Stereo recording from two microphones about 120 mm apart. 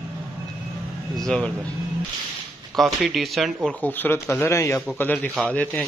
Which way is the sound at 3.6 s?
15° left (ahead or behind).